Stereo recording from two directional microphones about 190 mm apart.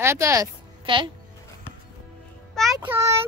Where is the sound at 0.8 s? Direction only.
25° right (ahead or behind).